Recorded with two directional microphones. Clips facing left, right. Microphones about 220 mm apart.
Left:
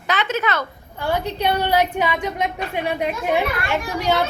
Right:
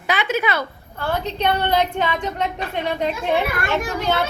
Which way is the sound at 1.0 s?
10° left (ahead or behind).